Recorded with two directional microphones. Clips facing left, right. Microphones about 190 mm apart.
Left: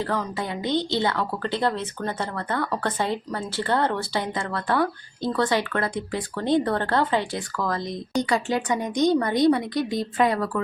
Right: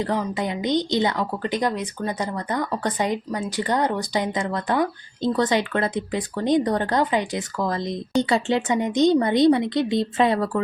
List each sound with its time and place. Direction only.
0.0 s a woman's voice: 15° right (ahead or behind)